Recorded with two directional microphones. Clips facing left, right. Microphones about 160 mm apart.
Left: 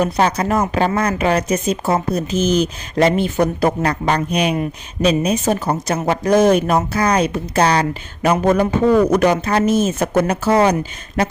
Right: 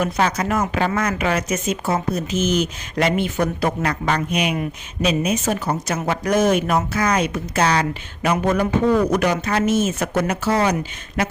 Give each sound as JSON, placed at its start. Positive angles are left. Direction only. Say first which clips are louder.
{"t": 0.0, "sound": "speech", "louder": "left 4 dB", "side_deg": 35}